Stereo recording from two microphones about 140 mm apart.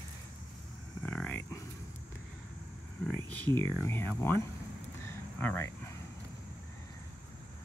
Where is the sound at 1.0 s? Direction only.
10° left (ahead or behind).